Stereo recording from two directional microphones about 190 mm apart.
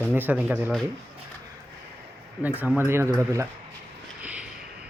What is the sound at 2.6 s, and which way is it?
Speech, 10° right (ahead or behind).